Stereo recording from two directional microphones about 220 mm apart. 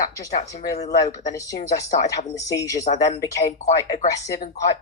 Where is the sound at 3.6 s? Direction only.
30° left (ahead or behind).